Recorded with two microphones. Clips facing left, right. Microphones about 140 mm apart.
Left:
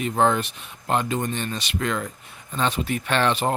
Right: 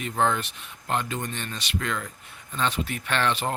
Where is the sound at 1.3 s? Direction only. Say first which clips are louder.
Left 4 dB; 15° left (ahead or behind).